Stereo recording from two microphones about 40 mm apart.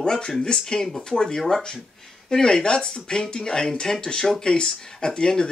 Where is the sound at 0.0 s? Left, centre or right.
Left.